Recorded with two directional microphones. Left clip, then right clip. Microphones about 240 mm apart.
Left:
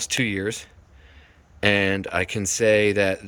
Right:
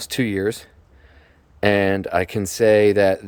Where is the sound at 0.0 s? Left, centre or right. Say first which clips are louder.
Right 2 dB; right.